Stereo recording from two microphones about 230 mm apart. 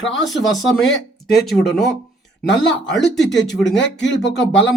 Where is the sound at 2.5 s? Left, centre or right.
Left.